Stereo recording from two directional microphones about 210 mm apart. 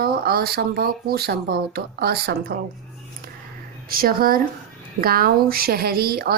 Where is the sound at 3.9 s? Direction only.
45° right (ahead or behind).